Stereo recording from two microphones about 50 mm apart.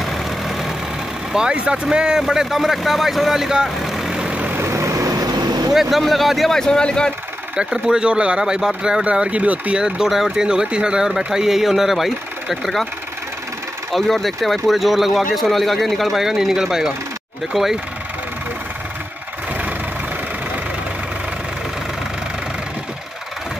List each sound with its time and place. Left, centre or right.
0.0 s vehicle: centre
1.3 s speech: centre
2.2 s speech: centre
4.1 s vehicle: centre
4.6 s vehicle: right
5.7 s speech: centre
6.5 s speech: centre
7.5 s speech: centre
9.0 s speech: right
9.8 s speech: centre
13.9 s speech: centre